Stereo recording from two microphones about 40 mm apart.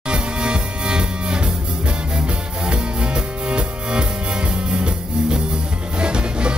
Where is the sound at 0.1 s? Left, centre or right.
Right.